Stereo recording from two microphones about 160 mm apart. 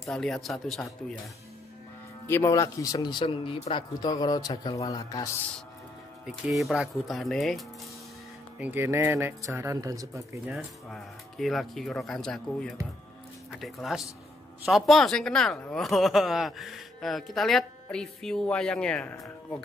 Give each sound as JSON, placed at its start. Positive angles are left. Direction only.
{"t": 0.0, "sound": "speech", "side_deg": 5}
{"t": 2.2, "sound": "speech", "side_deg": 15}
{"t": 6.2, "sound": "speech", "side_deg": 0}
{"t": 8.5, "sound": "speech", "side_deg": -10}
{"t": 10.5, "sound": "speech", "side_deg": 0}